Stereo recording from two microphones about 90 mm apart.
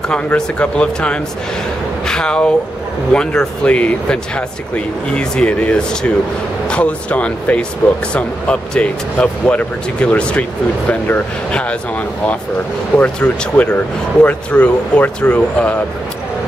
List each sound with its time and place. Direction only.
0.1 s speech: 10° left (ahead or behind)
12.9 s speech: 15° left (ahead or behind)